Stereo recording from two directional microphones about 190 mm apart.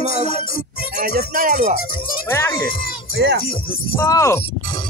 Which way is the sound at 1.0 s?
45° right (ahead or behind).